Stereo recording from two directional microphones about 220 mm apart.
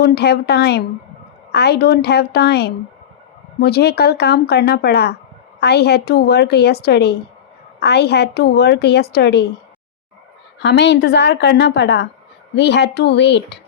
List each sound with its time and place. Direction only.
0.0 s a woman's voice: 45° left (ahead or behind)
10.6 s a woman's voice: 50° left (ahead or behind)